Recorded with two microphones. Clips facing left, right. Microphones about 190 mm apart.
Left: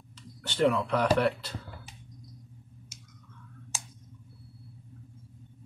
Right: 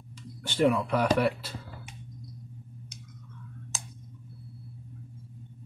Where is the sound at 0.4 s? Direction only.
10° right (ahead or behind).